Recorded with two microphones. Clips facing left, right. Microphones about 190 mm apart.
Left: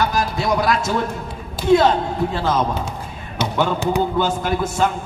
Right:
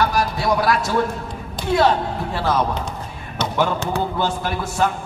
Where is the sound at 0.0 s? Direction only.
20° left (ahead or behind).